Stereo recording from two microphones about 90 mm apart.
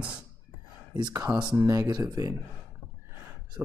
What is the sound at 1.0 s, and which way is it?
Speech, 40° right (ahead or behind).